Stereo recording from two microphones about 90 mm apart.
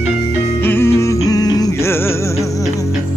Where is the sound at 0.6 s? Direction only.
25° left (ahead or behind); by 1.7 s 45° left (ahead or behind).